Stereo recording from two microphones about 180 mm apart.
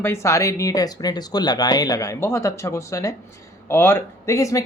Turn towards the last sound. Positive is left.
turn(degrees=15)  # may be behind; listen again after turning